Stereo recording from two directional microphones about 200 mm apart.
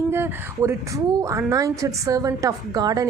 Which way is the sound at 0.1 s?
10° right (ahead or behind).